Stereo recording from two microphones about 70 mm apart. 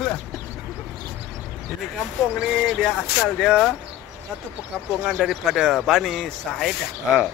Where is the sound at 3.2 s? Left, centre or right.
Centre.